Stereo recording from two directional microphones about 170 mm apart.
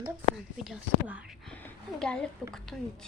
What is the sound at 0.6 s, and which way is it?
Speech, 5° right (ahead or behind).